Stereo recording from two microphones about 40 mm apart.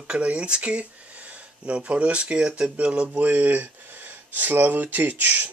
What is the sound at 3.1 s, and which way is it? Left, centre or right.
Speech, right.